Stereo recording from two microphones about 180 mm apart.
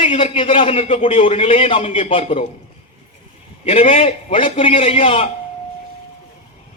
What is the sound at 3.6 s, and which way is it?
A man's voice, 35° left (ahead or behind).